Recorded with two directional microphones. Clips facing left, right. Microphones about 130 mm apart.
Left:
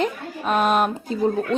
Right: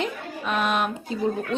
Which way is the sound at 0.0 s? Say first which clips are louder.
Left 4 dB; 40° left (ahead or behind).